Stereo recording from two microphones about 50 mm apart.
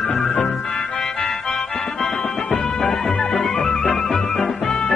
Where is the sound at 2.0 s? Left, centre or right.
Centre.